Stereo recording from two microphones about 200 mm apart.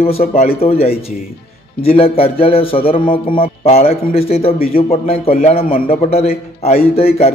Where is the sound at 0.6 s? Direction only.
30° left (ahead or behind).